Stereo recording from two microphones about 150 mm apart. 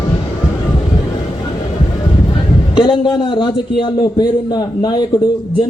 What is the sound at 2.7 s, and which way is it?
A man's voice, 35° left (ahead or behind).